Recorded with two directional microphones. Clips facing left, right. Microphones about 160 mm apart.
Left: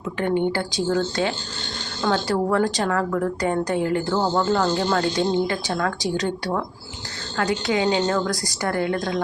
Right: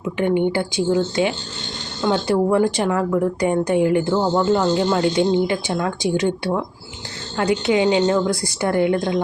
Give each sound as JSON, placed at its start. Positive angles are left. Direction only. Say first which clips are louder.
{"t": 0.2, "sound": "a woman's voice", "louder": "right 3 dB", "side_deg": -15}